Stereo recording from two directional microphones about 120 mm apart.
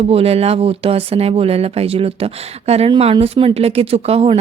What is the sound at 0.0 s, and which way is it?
Speech, 55° right (ahead or behind).